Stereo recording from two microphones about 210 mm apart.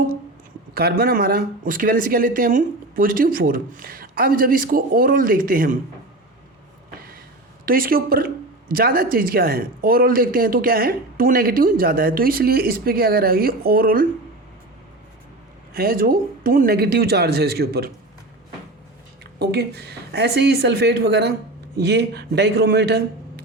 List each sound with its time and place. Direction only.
0.7 s speech: 45° right (ahead or behind)
7.6 s speech: 45° right (ahead or behind)
15.7 s speech: 45° right (ahead or behind)
19.4 s speech: 50° right (ahead or behind)